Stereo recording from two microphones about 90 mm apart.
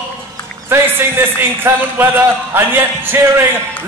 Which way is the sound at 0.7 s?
25° right (ahead or behind).